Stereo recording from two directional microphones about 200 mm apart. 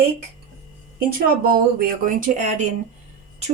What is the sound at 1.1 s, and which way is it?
Speech, 45° right (ahead or behind).